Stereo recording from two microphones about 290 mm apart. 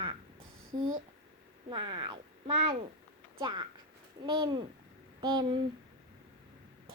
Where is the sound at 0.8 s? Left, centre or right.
Right.